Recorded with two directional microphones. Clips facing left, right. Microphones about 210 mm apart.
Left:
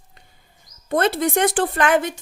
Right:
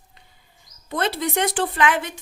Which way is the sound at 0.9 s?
50° left (ahead or behind).